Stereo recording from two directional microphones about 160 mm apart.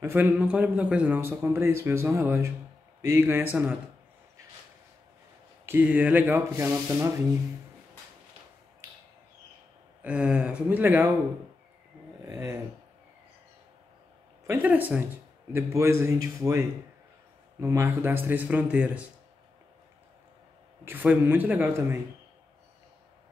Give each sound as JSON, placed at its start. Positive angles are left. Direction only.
{"t": 0.0, "sound": "a man's voice", "side_deg": -10}
{"t": 5.7, "sound": "a man's voice", "side_deg": -10}
{"t": 10.0, "sound": "a man's voice", "side_deg": -5}
{"t": 12.2, "sound": "speech", "side_deg": -20}
{"t": 14.4, "sound": "a man's voice", "side_deg": -10}
{"t": 20.8, "sound": "a man's voice", "side_deg": -10}